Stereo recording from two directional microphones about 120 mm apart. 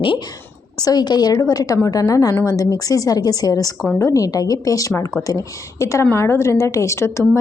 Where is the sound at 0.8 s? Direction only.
35° left (ahead or behind).